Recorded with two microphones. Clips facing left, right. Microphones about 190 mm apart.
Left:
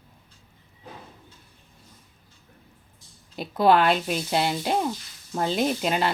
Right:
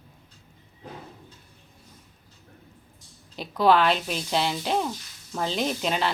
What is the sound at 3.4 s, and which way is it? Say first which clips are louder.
Speech: left 1 dB; 50° left (ahead or behind).